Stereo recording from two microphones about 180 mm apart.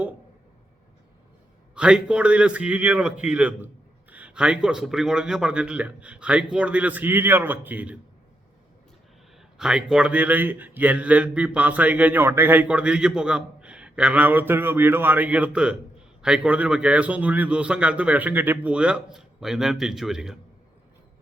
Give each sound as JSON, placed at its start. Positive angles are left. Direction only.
{"t": 1.7, "sound": "a man's voice", "side_deg": -5}
{"t": 9.6, "sound": "a man's voice", "side_deg": -5}